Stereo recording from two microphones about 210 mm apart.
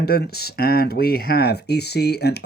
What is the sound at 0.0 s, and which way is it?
Speech, 50° left (ahead or behind).